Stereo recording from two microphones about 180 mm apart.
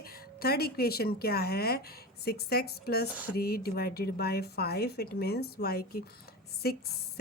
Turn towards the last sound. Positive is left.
turn(degrees=60)  # may be behind; listen again after turning